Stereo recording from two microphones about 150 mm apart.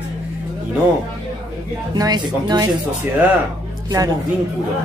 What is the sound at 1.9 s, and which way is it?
Speech, 25° right (ahead or behind).